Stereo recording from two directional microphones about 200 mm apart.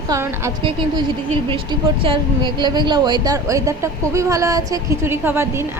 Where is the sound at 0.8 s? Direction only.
25° right (ahead or behind).